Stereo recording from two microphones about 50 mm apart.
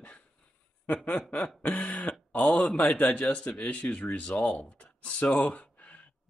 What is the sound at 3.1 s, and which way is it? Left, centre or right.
Speech, left.